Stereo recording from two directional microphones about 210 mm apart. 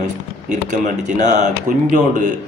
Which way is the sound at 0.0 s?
35° right (ahead or behind).